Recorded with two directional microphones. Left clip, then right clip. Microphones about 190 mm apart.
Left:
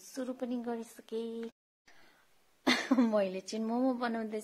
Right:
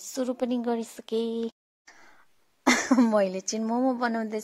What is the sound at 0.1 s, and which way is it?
A woman's voice, 35° right (ahead or behind).